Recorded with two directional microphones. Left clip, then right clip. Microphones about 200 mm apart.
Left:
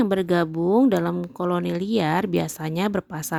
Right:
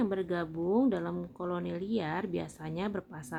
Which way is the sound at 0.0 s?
50° left (ahead or behind).